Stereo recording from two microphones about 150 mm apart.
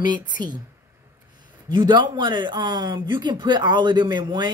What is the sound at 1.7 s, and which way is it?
A woman's voice, 30° right (ahead or behind).